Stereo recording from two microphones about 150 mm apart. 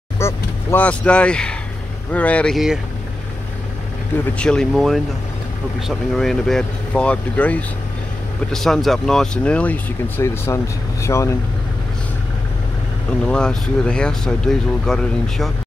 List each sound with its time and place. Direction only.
0.2 s vehicle: 15° left (ahead or behind)
2.1 s speech: 10° left (ahead or behind)
4.4 s speech: 5° left (ahead or behind); by 11.3 s 20° left (ahead or behind)
13.2 s speech: 5° left (ahead or behind)